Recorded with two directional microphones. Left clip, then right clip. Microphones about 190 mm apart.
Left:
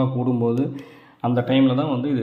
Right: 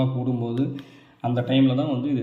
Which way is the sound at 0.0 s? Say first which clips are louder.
Left 5 dB; 20° left (ahead or behind).